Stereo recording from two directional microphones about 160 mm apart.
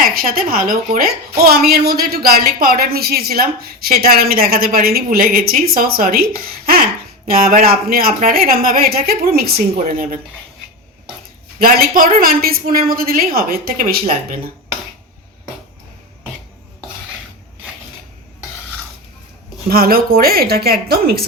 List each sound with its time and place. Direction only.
0.0 s a woman's voice: 65° right (ahead or behind)
7.3 s a woman's voice: 70° right (ahead or behind)
11.6 s a woman's voice: 65° right (ahead or behind)
19.6 s a woman's voice: 70° right (ahead or behind)